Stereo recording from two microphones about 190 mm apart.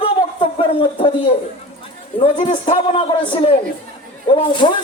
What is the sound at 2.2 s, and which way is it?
A woman's voice, 30° left (ahead or behind).